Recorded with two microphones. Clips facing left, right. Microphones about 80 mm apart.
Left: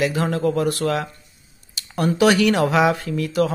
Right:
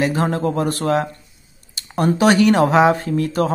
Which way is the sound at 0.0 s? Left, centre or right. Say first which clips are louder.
Right 1 dB; right.